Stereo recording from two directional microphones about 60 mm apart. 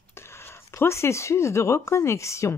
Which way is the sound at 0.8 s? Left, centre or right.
Left.